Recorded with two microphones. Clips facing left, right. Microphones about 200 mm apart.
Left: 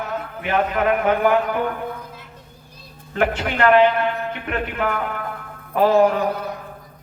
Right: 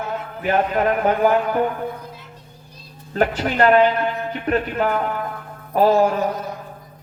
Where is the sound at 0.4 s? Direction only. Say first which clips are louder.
Right 1 dB; 40° right (ahead or behind).